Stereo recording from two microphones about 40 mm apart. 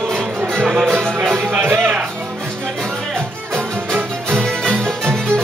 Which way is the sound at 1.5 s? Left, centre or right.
Right.